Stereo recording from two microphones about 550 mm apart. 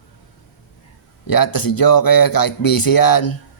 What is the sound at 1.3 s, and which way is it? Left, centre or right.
Speech, left.